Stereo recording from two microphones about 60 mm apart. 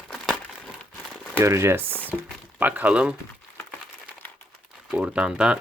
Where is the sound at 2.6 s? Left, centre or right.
Right.